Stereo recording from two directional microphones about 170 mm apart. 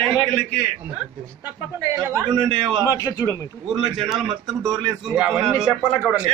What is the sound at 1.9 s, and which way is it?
Speech, 20° right (ahead or behind).